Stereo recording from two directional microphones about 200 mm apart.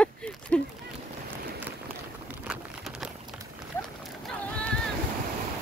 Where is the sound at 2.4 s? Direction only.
5° right (ahead or behind).